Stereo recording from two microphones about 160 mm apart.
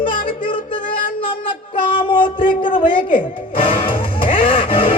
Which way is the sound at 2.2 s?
30° left (ahead or behind).